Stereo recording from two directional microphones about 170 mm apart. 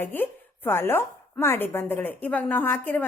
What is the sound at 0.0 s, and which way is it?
Speech, 10° left (ahead or behind).